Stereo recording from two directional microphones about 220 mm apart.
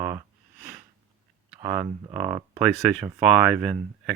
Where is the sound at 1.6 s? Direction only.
10° right (ahead or behind).